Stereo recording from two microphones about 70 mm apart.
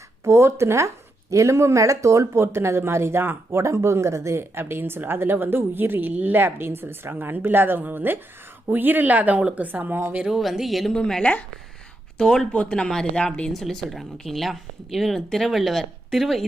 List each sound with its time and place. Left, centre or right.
0.3 s speech: right
6.4 s speech: right
10.2 s speech: centre
10.9 s speech: centre